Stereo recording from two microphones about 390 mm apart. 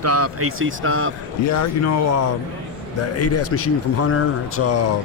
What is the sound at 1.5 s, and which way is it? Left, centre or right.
Speech, left.